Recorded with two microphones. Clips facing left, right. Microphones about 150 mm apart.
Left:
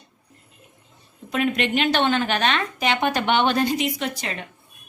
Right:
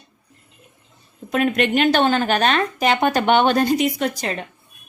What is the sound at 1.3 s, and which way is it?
A woman's voice, 50° right (ahead or behind).